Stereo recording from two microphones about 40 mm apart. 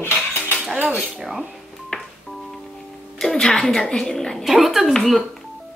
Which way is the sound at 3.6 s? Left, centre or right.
Centre.